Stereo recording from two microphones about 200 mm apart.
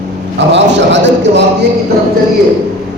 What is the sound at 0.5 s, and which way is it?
Speech, 60° right (ahead or behind).